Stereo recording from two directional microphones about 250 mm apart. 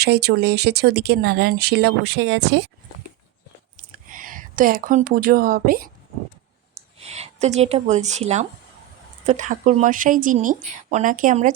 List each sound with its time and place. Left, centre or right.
0.0 s speech: right
4.1 s speech: right
6.7 s a woman's voice: right